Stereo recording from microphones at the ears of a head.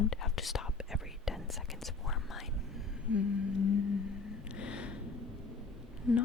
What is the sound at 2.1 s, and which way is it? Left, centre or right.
Speech, left.